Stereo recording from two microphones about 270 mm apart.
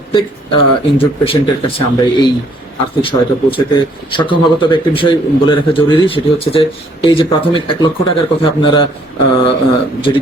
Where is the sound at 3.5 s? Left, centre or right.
Centre.